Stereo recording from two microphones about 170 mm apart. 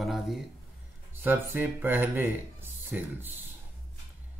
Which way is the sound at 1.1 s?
10° right (ahead or behind).